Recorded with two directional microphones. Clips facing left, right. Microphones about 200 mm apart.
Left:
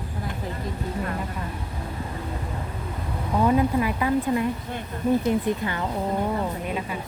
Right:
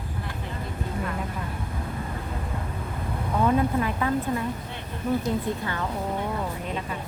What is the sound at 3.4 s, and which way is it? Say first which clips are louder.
Speech: left 2 dB; 10° left (ahead or behind).